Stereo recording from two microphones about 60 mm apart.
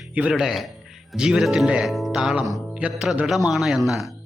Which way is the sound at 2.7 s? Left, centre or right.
Centre.